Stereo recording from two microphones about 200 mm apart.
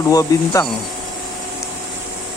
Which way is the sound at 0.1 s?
15° left (ahead or behind).